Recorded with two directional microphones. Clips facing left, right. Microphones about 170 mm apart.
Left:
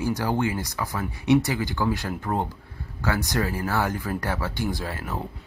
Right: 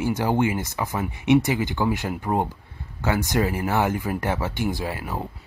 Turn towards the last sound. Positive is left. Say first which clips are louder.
# right 2 dB
turn(degrees=-10)  # may be behind; listen again after turning